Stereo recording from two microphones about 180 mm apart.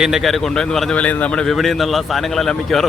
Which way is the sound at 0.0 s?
Centre (ahead or behind).